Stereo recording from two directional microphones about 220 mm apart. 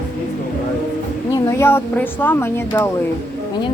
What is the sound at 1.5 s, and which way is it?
Speech, 10° left (ahead or behind).